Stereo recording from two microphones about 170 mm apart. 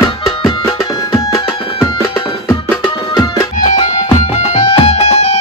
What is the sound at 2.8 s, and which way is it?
Music, 25° left (ahead or behind).